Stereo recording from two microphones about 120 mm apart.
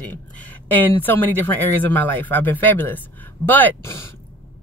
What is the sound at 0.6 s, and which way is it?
Speech, 15° left (ahead or behind).